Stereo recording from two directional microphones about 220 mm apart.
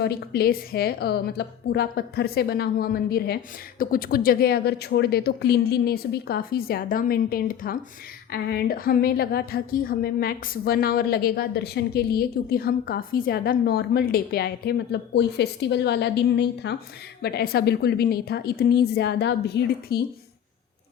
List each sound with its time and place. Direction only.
0.0 s a woman's voice: 45° left (ahead or behind)